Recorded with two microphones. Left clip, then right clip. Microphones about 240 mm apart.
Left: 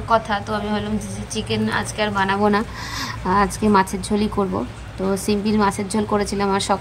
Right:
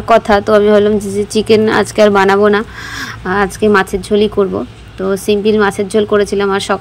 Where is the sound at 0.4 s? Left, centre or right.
Centre.